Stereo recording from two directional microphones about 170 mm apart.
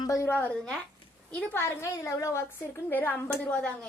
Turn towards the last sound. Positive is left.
turn(degrees=10)  # may be behind; listen again after turning